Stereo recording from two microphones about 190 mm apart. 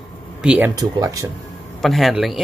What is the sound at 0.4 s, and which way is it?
Speech, 5° right (ahead or behind).